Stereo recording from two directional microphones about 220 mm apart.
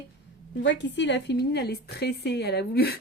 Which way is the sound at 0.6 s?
55° left (ahead or behind).